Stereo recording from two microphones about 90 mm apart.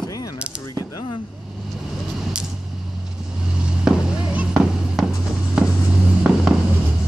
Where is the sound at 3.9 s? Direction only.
5° right (ahead or behind).